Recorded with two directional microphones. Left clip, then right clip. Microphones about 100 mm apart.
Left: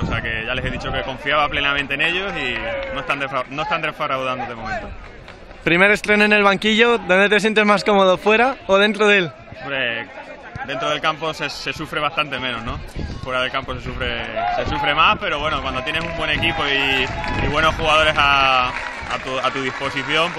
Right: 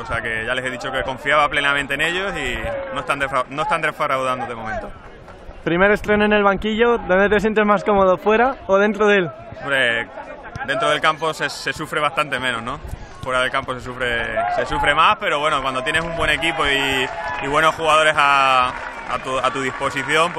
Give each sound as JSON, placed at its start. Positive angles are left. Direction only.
{"t": 0.1, "sound": "speech", "side_deg": -20}
{"t": 5.7, "sound": "speech", "side_deg": 10}
{"t": 9.7, "sound": "a man's voice", "side_deg": -25}